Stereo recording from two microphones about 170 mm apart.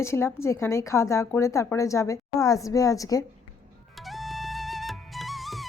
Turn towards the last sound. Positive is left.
turn(degrees=0)  # may be behind; listen again after turning